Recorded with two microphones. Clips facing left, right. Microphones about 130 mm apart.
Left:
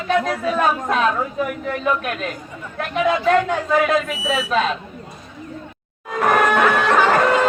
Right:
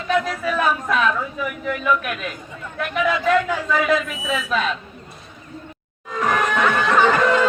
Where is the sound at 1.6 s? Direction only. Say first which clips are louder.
Right 4 dB; 35° left (ahead or behind).